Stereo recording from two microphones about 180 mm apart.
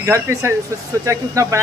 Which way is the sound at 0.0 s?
15° right (ahead or behind).